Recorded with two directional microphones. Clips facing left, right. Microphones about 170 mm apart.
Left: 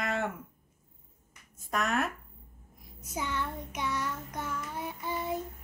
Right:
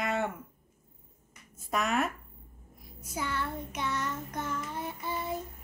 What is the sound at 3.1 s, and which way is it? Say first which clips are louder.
Child singing: even; 15° left (ahead or behind).